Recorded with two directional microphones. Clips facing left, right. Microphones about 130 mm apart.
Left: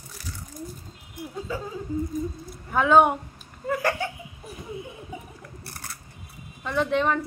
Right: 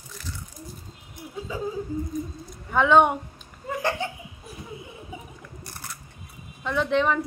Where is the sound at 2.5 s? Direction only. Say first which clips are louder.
Even; 5° left (ahead or behind).